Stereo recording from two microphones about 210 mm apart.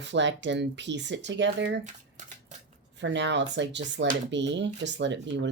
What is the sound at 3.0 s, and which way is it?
Speech, 55° right (ahead or behind).